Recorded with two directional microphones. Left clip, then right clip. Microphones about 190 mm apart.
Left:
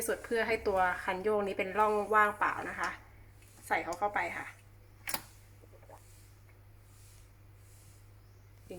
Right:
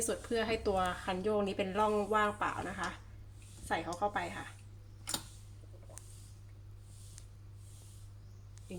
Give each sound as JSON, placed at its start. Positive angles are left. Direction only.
{"t": 0.0, "sound": "a woman's voice", "side_deg": -15}